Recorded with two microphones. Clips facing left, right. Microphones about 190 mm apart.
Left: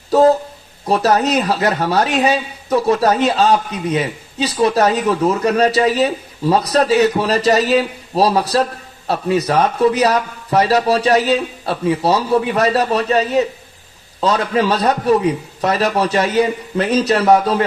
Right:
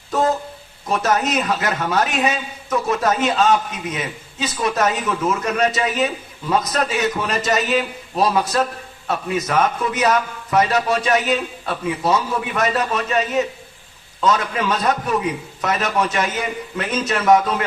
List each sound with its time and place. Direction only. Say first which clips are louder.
0.1 s a man's voice: left 8 dB; 35° left (ahead or behind)